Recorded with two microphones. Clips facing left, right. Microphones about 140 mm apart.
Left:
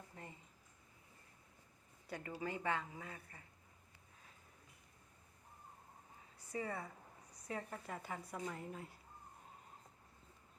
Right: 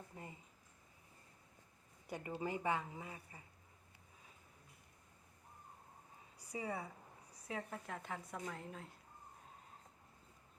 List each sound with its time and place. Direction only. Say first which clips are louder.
0.1 s a sound: right 1 dB; 10° right (ahead or behind)
2.0 s a woman's voice: right 2 dB; 20° right (ahead or behind)
6.5 s a woman's voice: even; 10° right (ahead or behind)